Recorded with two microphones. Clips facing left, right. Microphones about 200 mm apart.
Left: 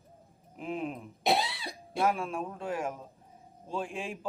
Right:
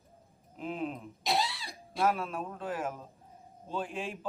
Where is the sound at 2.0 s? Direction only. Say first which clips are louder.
Even; 10° left (ahead or behind).